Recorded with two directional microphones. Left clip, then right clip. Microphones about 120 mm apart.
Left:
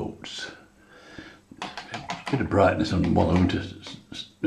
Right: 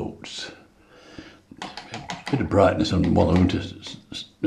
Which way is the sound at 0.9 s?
10° right (ahead or behind).